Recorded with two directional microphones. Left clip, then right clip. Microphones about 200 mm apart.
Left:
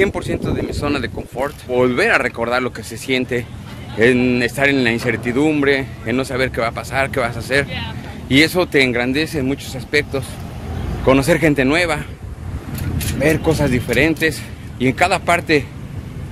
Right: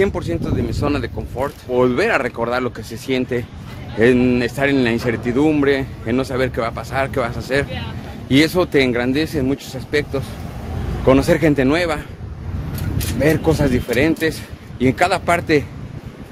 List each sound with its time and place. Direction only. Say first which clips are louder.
0.0 s speech: left 1 dB; 10° right (ahead or behind)
13.2 s speech: even; 25° right (ahead or behind)
13.9 s speech: left 2 dB; 10° right (ahead or behind)
14.8 s speech: left 1 dB; 25° right (ahead or behind)